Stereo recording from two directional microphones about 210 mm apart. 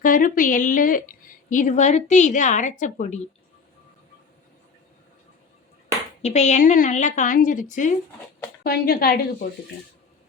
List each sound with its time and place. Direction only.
0.0 s a woman's voice: 40° left (ahead or behind)
6.2 s a woman's voice: 30° left (ahead or behind)